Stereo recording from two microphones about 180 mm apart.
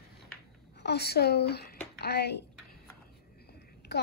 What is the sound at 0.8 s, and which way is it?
Speech, 65° left (ahead or behind).